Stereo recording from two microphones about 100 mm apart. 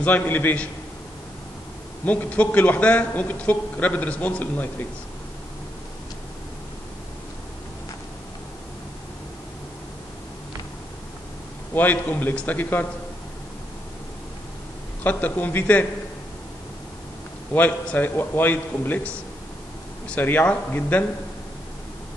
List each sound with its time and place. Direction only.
0.0 s a man's voice: 15° left (ahead or behind)
2.0 s a man's voice: 15° left (ahead or behind)
11.7 s a man's voice: 15° left (ahead or behind)
15.0 s a man's voice: 15° left (ahead or behind)
17.6 s a man's voice: 15° left (ahead or behind)
20.1 s a man's voice: 20° left (ahead or behind)